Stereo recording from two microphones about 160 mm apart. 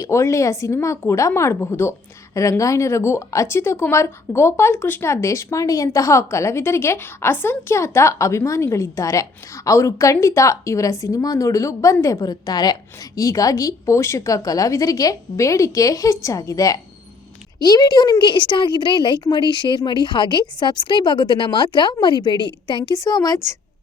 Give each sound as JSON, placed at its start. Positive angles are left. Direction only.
{"t": 0.0, "sound": "a woman's voice", "side_deg": 20}